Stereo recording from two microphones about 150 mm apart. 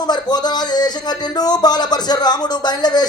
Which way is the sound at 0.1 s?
30° left (ahead or behind).